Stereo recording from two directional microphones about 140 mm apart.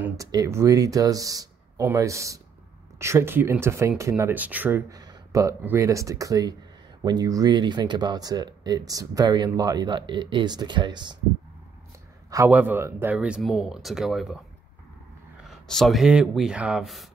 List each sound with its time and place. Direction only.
0.2 s speech: 25° right (ahead or behind)
4.9 s speech: 25° right (ahead or behind)
12.4 s speech: 10° right (ahead or behind)
15.7 s speech: centre (ahead or behind)